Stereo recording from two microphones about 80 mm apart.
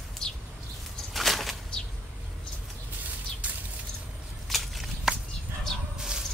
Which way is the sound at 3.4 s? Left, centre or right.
Centre.